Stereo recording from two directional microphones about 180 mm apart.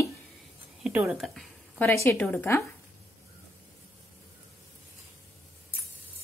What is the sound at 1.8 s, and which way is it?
Speech, 15° left (ahead or behind).